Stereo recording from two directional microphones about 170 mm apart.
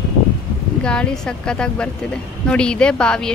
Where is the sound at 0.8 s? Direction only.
5° left (ahead or behind).